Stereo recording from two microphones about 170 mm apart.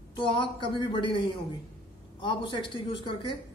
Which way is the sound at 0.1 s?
30° left (ahead or behind).